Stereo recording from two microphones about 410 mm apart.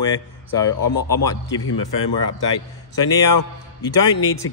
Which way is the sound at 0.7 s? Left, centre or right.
Left.